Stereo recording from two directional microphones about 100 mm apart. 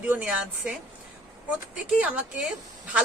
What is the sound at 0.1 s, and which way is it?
Speech, 10° right (ahead or behind).